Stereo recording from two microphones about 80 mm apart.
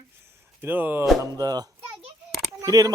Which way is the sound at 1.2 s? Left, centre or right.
Right.